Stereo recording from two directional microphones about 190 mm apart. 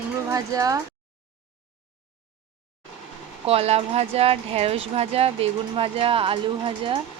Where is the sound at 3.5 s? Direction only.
35° right (ahead or behind).